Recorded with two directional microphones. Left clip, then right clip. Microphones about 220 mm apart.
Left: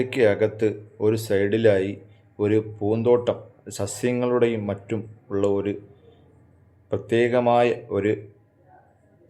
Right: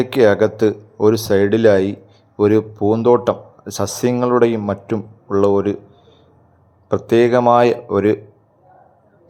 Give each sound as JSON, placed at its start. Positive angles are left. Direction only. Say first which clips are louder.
{"t": 0.0, "sound": "speech", "louder": "right 7 dB", "side_deg": -20}
{"t": 6.8, "sound": "speech", "louder": "right 8 dB", "side_deg": -20}